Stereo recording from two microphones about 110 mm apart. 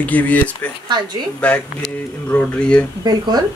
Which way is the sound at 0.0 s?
15° left (ahead or behind).